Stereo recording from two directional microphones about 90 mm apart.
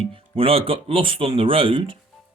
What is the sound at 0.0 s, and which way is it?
Speech, 85° right.